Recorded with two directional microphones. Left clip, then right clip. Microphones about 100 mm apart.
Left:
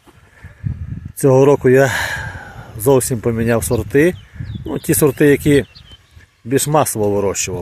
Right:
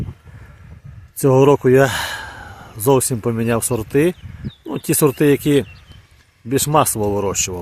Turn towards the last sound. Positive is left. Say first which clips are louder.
# left 2 dB
turn(degrees=20)  # may be behind; listen again after turning